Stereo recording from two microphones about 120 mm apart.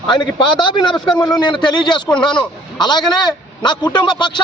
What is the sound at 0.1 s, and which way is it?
A man's voice, 40° left (ahead or behind).